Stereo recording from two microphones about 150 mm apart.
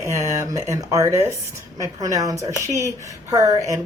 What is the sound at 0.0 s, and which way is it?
Speech, 20° right (ahead or behind).